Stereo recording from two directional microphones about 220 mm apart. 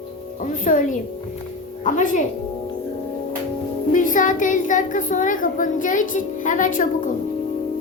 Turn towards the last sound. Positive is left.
turn(degrees=35)  # may be behind; listen again after turning